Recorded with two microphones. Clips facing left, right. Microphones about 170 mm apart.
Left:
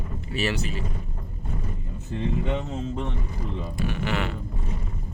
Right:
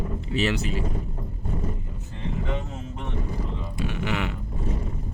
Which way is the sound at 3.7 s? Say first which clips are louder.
Even; 20° right (ahead or behind).